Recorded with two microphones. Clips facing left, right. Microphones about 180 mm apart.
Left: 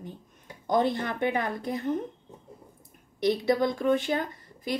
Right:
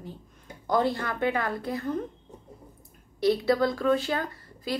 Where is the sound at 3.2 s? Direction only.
20° left (ahead or behind).